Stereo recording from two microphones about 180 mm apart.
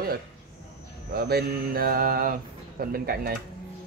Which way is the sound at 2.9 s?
55° right (ahead or behind).